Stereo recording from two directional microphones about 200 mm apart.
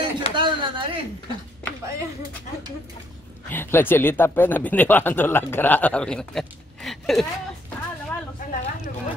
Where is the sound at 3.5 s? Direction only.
10° left (ahead or behind).